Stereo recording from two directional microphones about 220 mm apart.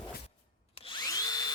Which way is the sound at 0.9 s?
15° left (ahead or behind).